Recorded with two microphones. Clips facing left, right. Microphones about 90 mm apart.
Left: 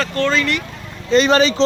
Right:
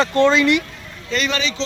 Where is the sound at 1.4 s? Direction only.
45° left (ahead or behind).